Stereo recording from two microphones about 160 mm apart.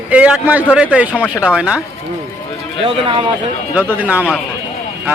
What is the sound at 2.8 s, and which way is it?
Speech, 35° right (ahead or behind).